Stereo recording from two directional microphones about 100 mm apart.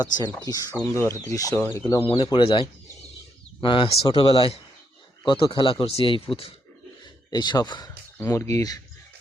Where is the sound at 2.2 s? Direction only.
55° left (ahead or behind).